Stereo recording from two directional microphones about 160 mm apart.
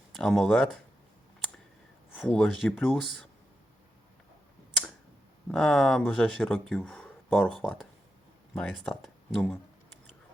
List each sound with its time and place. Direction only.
0.2 s speech: centre (ahead or behind)
2.1 s speech: 5° left (ahead or behind)
5.5 s speech: centre (ahead or behind)
9.0 s speech: 5° right (ahead or behind)